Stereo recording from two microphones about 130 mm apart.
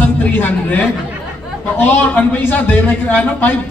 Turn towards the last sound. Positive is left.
turn(degrees=10)  # may be behind; listen again after turning